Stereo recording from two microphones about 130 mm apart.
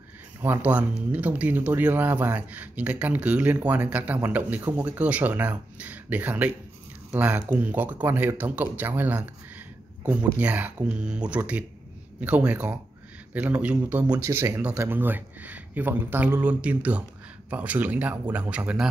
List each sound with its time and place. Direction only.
0.4 s speech: 15° right (ahead or behind)
14.0 s speech: 30° right (ahead or behind)
14.3 s speech: 20° right (ahead or behind)